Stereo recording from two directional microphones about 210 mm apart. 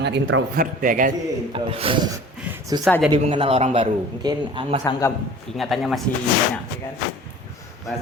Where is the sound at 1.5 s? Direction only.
25° right (ahead or behind).